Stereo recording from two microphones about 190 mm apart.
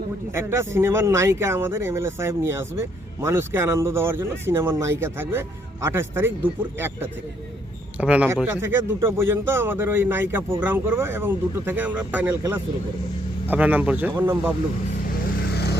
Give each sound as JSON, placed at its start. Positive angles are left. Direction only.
{"t": 0.3, "sound": "a man's voice", "side_deg": -15}
{"t": 15.4, "sound": "vehicle", "side_deg": 60}